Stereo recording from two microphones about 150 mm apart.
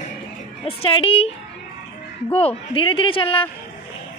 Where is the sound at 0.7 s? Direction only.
35° left (ahead or behind).